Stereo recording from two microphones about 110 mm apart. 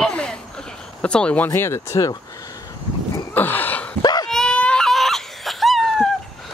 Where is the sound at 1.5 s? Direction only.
25° left (ahead or behind).